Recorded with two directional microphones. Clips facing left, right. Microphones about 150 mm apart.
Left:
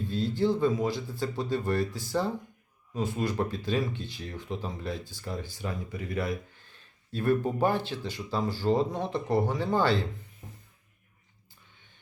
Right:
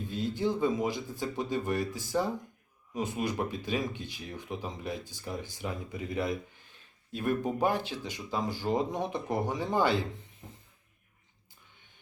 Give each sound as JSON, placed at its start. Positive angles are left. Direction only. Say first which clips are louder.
{"t": 0.1, "sound": "speech", "louder": "left 4 dB", "side_deg": -15}